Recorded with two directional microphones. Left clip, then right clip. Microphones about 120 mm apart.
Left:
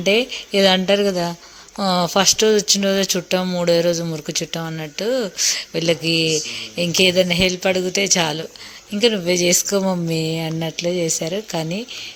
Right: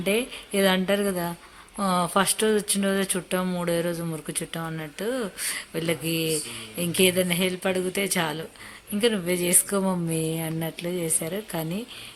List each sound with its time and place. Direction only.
0.0 s speech: 30° left (ahead or behind)